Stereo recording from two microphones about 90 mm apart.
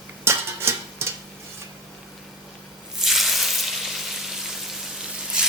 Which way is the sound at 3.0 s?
Centre (ahead or behind).